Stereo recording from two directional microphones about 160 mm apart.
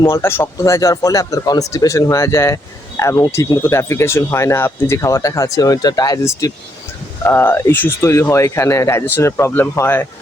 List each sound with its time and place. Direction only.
0.0 s speech: 15° left (ahead or behind)